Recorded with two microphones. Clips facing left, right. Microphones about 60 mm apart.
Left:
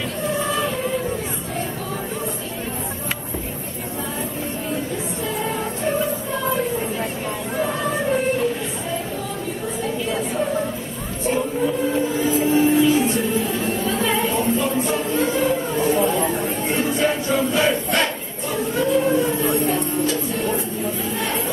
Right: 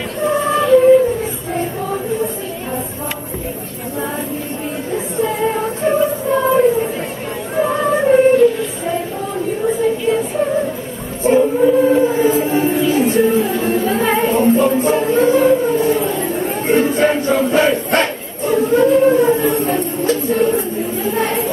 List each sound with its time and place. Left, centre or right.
5.2 s music: right
11.2 s music: right
16.4 s crowd: right
21.1 s chatter: right